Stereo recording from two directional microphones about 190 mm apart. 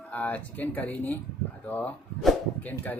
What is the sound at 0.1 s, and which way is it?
Speech, 10° left (ahead or behind).